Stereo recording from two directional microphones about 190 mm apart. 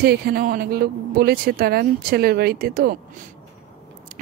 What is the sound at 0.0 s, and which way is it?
A woman's voice, 55° right (ahead or behind).